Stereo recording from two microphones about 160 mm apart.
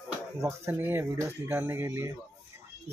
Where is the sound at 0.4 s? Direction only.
15° right (ahead or behind).